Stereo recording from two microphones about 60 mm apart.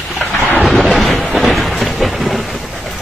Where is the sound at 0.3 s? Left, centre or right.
Left.